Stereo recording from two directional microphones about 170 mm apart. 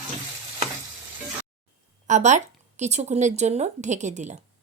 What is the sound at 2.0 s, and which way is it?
Speech, 45° right (ahead or behind).